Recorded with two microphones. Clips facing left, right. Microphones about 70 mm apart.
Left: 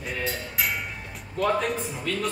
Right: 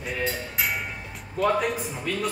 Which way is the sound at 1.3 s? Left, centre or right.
Centre.